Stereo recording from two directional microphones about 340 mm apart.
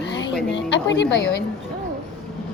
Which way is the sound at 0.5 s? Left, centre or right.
Left.